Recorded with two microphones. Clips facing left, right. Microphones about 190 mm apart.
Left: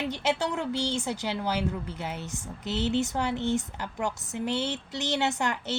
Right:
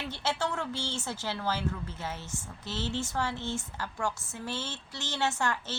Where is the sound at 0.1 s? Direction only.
15° left (ahead or behind).